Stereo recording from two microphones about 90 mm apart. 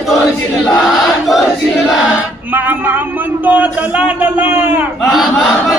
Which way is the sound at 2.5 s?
20° right (ahead or behind).